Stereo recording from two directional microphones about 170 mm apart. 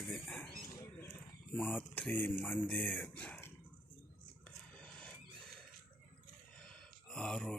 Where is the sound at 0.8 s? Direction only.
20° left (ahead or behind).